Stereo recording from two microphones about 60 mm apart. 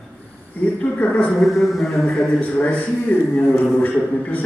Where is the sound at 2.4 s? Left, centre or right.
Left.